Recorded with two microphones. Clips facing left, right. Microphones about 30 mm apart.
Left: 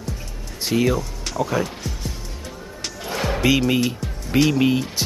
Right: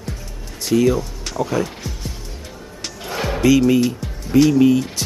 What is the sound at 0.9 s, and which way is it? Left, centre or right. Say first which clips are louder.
Music: right 1 dB; centre.